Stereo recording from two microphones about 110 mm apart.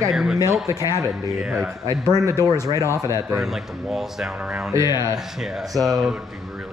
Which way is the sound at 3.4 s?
5° right (ahead or behind).